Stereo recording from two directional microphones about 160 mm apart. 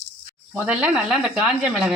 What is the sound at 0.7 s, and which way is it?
Speech, 5° right (ahead or behind).